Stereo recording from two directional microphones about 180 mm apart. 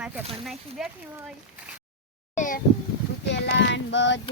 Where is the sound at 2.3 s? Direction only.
45° left (ahead or behind).